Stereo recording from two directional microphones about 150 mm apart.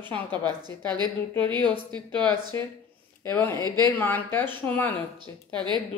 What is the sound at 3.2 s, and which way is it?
Speech, 15° left (ahead or behind).